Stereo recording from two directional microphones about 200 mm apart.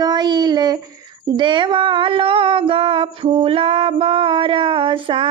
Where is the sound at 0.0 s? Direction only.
20° right (ahead or behind).